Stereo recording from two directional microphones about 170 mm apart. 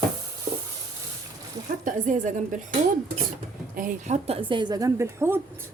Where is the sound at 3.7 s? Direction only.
50° right (ahead or behind).